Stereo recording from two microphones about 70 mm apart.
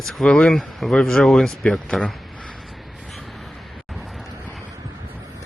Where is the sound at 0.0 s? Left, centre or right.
Centre.